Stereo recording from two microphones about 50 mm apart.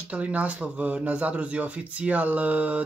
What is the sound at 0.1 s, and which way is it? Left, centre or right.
Speech, right.